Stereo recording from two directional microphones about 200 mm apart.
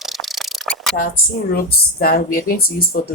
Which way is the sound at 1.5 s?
50° left (ahead or behind).